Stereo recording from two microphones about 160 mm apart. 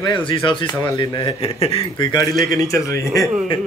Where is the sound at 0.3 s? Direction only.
30° left (ahead or behind).